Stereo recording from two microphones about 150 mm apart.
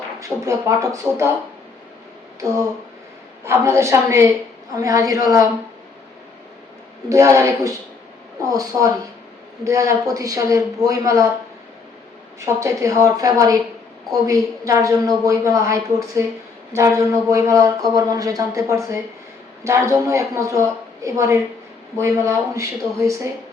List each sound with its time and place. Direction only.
0.2 s speech: 20° right (ahead or behind)
3.4 s a woman's voice: 15° right (ahead or behind)
7.1 s speech: 20° right (ahead or behind)
12.5 s speech: 20° right (ahead or behind)
14.6 s speech: 20° right (ahead or behind)